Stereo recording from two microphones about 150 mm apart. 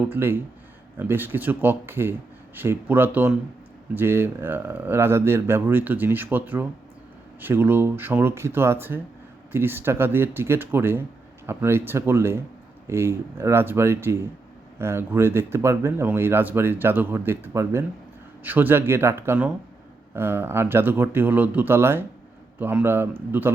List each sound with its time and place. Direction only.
0.1 s speech: 15° right (ahead or behind)